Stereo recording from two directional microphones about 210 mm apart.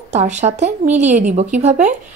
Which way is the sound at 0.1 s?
35° right (ahead or behind).